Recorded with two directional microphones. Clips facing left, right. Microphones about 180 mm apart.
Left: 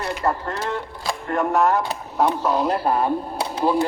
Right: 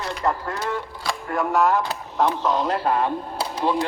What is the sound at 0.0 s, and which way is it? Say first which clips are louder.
Mechanisms: left 1 dB; 5° left (ahead or behind).